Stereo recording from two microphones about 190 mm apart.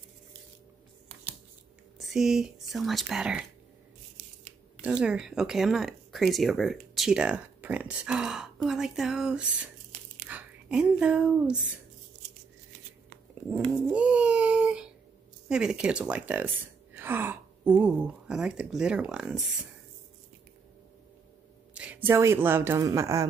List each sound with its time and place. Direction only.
2.0 s speech: centre (ahead or behind)
4.2 s scissors: 45° right (ahead or behind)
4.8 s speech: 5° right (ahead or behind)
13.3 s dog: 10° right (ahead or behind)
15.4 s speech: 5° right (ahead or behind)
21.7 s speech: 10° right (ahead or behind)